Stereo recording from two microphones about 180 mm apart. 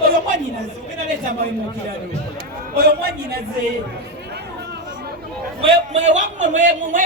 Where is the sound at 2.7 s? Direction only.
60° right (ahead or behind).